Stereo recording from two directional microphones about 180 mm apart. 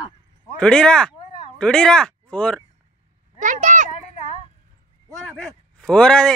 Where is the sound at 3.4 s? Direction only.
45° right (ahead or behind).